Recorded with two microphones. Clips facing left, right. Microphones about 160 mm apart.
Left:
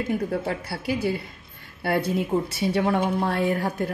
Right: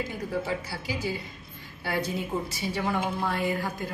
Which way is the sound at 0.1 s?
60° left (ahead or behind).